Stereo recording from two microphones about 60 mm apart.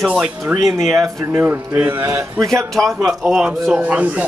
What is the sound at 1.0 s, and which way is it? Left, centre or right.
Speech, right.